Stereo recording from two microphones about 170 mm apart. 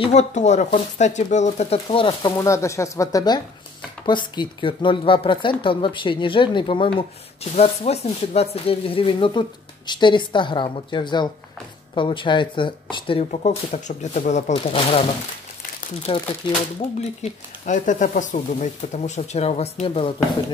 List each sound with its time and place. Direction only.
0.0 s speech: 40° left (ahead or behind)
16.1 s speech: 30° left (ahead or behind)
17.2 s speech: 45° left (ahead or behind)